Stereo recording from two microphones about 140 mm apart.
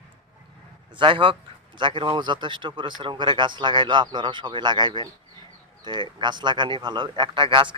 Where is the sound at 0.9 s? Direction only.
35° right (ahead or behind).